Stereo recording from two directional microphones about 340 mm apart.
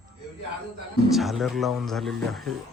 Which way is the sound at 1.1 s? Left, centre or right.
Centre.